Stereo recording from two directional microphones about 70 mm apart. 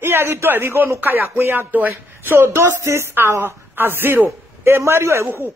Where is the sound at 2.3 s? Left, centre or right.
Right.